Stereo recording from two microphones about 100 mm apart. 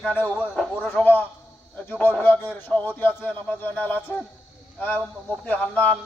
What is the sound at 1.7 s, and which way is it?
Speech, 15° left (ahead or behind).